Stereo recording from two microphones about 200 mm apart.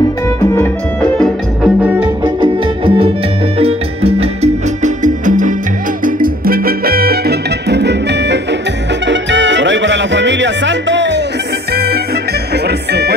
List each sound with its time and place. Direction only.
0.6 s music: 5° left (ahead or behind)
1.9 s music: 10° right (ahead or behind)
2.4 s music: 25° right (ahead or behind); by 13.1 s 55° right (ahead or behind)